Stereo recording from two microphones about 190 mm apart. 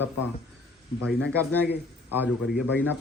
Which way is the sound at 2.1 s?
10° right (ahead or behind).